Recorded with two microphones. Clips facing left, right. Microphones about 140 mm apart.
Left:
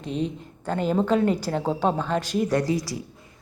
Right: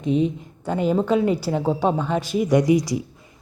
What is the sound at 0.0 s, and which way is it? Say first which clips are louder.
A woman's voice: right 7 dB; 10° right (ahead or behind).